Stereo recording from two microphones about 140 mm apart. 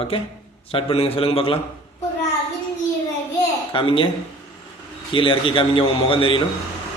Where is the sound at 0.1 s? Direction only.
40° left (ahead or behind).